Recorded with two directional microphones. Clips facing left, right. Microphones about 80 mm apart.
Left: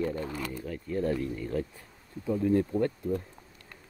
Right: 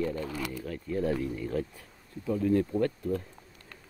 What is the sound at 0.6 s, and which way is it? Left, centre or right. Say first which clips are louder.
Speech: even; centre.